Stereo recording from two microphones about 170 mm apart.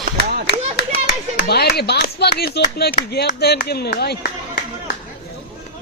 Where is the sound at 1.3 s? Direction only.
70° left (ahead or behind).